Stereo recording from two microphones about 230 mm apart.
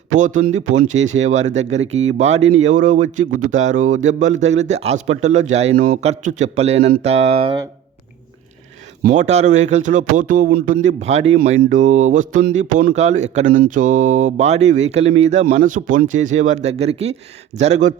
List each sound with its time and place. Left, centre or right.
0.2 s speech: right
9.0 s speech: right